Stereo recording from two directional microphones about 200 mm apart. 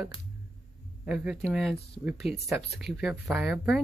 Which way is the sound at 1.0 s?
5° right (ahead or behind).